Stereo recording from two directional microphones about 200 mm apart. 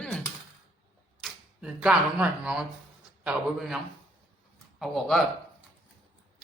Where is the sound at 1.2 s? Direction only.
5° right (ahead or behind).